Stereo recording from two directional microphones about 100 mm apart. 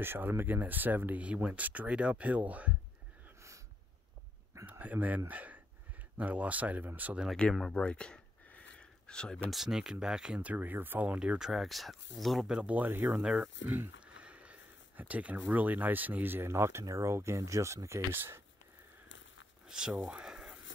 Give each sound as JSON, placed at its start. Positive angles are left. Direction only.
{"t": 0.0, "sound": "speech", "side_deg": -20}
{"t": 4.6, "sound": "speech", "side_deg": -15}
{"t": 7.2, "sound": "speech", "side_deg": 10}
{"t": 13.2, "sound": "speech", "side_deg": -10}
{"t": 19.7, "sound": "speech", "side_deg": -5}